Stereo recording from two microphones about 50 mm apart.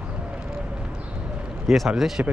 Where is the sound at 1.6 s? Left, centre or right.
Centre.